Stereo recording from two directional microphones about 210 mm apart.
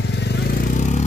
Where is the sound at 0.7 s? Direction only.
35° left (ahead or behind).